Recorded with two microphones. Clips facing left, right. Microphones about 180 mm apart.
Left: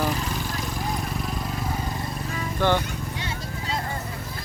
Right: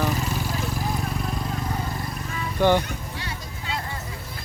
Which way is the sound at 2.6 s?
15° right (ahead or behind).